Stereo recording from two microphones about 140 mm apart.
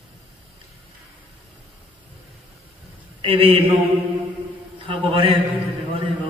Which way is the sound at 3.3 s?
40° right (ahead or behind).